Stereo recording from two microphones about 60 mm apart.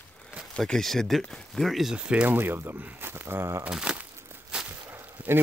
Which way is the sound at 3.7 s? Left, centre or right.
Centre.